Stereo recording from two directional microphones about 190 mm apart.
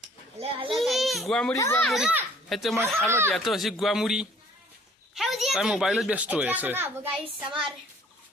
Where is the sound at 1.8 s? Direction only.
Centre (ahead or behind).